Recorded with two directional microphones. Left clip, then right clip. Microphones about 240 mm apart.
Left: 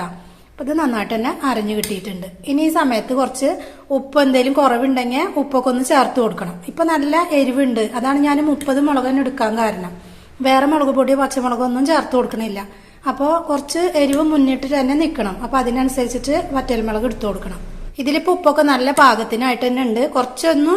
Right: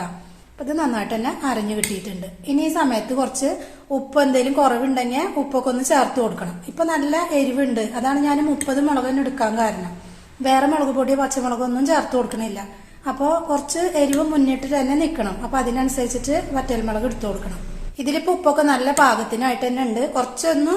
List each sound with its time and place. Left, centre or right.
0.6 s a woman's voice: left